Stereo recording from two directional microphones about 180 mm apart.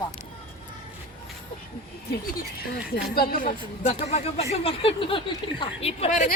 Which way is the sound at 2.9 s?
55° left (ahead or behind).